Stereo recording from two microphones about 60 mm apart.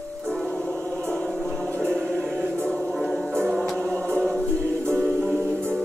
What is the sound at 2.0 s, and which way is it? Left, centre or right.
Choir, centre.